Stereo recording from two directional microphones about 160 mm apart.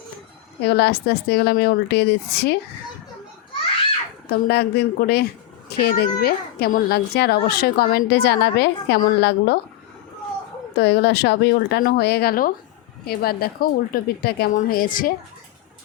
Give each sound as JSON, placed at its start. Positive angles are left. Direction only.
{"t": 0.6, "sound": "a woman's voice", "side_deg": 90}
{"t": 4.3, "sound": "a woman's voice", "side_deg": 90}
{"t": 10.8, "sound": "a woman's voice", "side_deg": 90}
{"t": 14.5, "sound": "a woman's voice", "side_deg": 60}